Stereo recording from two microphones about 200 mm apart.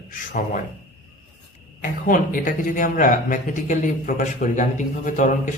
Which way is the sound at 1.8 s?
40° left (ahead or behind).